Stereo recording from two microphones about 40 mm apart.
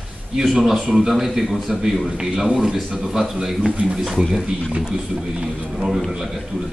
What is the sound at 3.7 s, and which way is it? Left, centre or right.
Speech, right.